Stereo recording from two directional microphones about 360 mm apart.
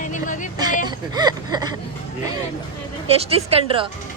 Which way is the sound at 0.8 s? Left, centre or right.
Centre.